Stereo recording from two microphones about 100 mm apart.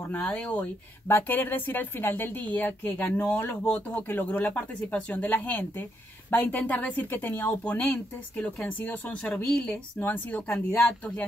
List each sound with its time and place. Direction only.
0.1 s speech: 15° left (ahead or behind)
9.2 s speech: 5° left (ahead or behind)
9.9 s speech: 20° left (ahead or behind)